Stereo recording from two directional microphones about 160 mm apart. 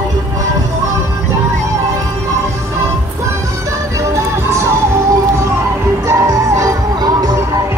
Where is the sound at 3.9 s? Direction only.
15° right (ahead or behind).